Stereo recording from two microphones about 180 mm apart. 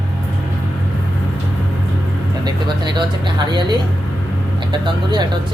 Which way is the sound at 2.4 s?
25° right (ahead or behind).